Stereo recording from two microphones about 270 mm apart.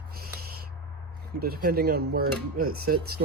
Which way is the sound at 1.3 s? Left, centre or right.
Right.